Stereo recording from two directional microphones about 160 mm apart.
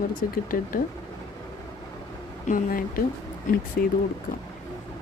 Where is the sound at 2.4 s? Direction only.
60° left (ahead or behind).